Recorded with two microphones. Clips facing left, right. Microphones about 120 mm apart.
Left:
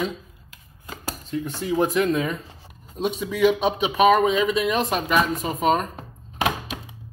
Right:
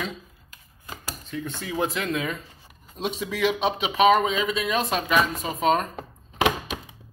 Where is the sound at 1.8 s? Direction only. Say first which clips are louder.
Left 5 dB; 35° left (ahead or behind).